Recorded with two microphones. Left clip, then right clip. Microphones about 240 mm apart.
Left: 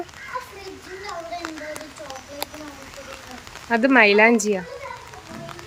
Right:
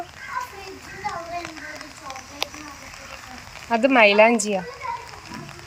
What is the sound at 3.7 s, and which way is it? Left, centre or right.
Speech, centre.